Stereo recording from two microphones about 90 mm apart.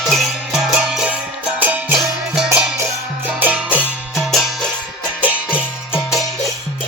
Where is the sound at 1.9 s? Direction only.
5° right (ahead or behind).